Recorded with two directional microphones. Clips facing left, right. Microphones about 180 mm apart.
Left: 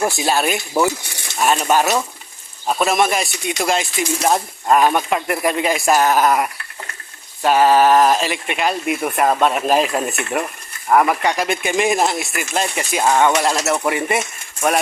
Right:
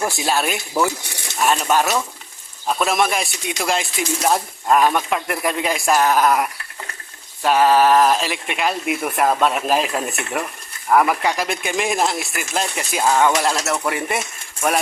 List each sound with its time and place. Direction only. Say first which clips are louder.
0.2 s speech: left 2 dB; centre (ahead or behind)